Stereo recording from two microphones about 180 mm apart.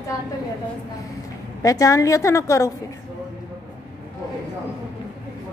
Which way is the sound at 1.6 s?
20° left (ahead or behind).